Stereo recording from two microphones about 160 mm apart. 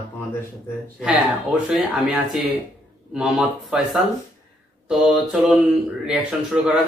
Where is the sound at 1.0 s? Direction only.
5° right (ahead or behind).